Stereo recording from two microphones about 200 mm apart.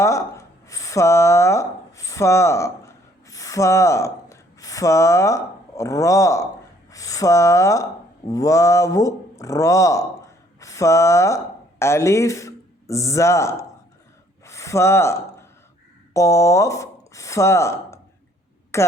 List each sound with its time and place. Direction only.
0.0 s speech: 15° left (ahead or behind)
14.4 s a sound: 15° left (ahead or behind)
16.1 s a woman's voice: 15° left (ahead or behind)